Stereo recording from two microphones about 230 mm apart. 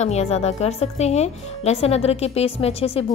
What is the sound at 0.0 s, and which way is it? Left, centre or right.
A woman's voice, left.